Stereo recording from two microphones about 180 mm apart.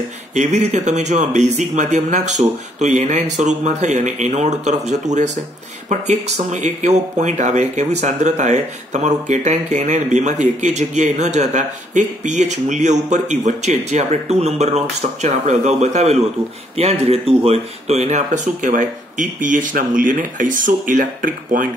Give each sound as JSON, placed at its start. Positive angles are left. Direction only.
{"t": 0.3, "sound": "speech", "side_deg": -40}